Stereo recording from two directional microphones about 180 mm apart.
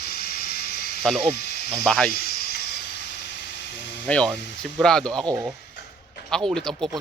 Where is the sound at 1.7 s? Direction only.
5° left (ahead or behind).